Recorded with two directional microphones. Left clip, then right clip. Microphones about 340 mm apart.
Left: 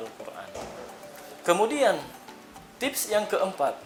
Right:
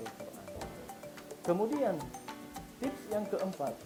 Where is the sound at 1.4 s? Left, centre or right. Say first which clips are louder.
Left 9 dB; centre.